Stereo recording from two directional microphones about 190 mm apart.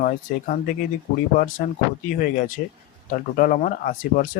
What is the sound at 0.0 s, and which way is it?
Speech, 45° left (ahead or behind).